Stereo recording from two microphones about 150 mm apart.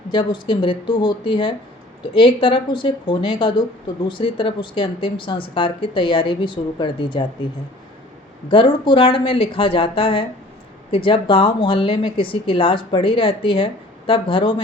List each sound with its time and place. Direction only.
0.1 s speech: 30° left (ahead or behind)
8.4 s speech: 35° left (ahead or behind)